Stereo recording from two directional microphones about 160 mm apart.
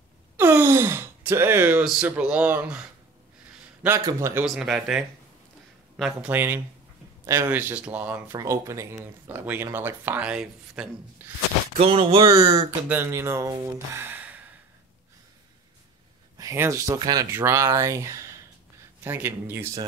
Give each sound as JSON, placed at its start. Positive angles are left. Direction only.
{"t": 0.4, "sound": "speech", "side_deg": -15}
{"t": 4.6, "sound": "speech", "side_deg": -5}
{"t": 6.2, "sound": "speech", "side_deg": -10}
{"t": 11.8, "sound": "speech", "side_deg": -35}
{"t": 12.8, "sound": "speech", "side_deg": -15}
{"t": 16.3, "sound": "speech", "side_deg": -20}